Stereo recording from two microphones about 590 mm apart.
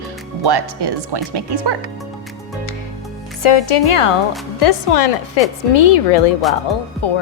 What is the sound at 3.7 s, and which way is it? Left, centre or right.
Speech, left.